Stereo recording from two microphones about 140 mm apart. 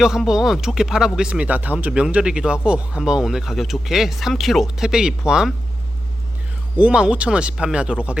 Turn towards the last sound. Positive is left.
turn(degrees=-5)  # may be behind; listen again after turning